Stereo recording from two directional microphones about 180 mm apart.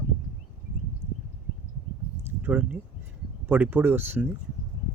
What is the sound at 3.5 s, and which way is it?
Speech, 10° right (ahead or behind).